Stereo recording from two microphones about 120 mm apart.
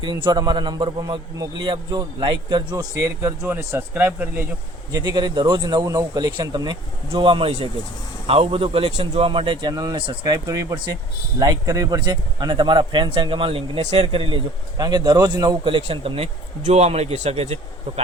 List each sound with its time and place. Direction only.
0.0 s a man's voice: 40° right (ahead or behind); by 4.4 s 15° right (ahead or behind)
4.9 s a man's voice: 35° right (ahead or behind)
15.6 s speech: 50° right (ahead or behind)
16.6 s a man's voice: 65° right (ahead or behind)